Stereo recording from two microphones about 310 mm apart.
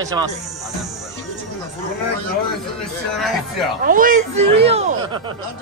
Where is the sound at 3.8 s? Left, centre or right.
Right.